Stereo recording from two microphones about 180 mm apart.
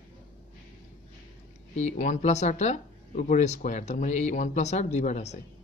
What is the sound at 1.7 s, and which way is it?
Speech, 40° left (ahead or behind).